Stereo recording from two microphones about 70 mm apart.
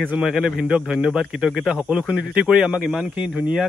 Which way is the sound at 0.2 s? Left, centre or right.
Centre.